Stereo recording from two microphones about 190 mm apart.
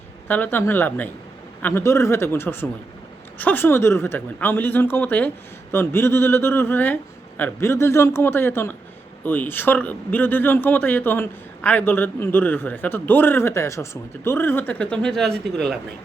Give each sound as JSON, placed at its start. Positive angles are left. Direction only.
{"t": 0.3, "sound": "a man's voice", "side_deg": 10}